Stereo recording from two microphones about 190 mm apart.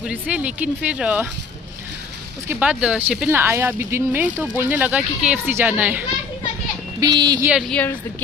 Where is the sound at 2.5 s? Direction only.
5° right (ahead or behind).